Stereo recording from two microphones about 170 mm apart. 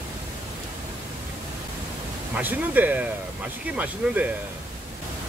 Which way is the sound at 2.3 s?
10° right (ahead or behind).